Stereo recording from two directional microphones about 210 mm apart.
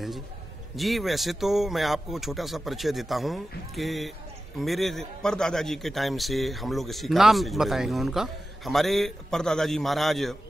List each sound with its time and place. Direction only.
0.7 s a man's voice: centre (ahead or behind)